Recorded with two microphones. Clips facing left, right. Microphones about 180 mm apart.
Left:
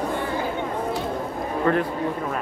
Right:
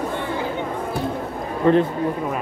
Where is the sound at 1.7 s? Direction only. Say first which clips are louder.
Right 6 dB; 20° right (ahead or behind).